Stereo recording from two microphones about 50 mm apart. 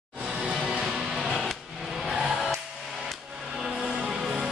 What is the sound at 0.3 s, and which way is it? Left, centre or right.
Music, centre.